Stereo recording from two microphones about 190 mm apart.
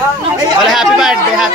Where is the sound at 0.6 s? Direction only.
Centre (ahead or behind).